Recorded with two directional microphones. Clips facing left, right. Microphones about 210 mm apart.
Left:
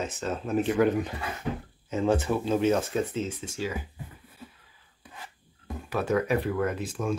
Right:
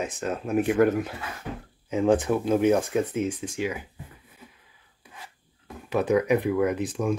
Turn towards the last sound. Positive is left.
turn(degrees=-15)  # may be behind; listen again after turning